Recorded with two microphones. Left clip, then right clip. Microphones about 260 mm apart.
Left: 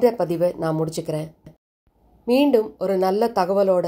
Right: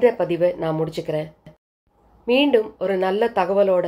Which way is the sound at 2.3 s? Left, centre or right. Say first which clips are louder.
Even; left.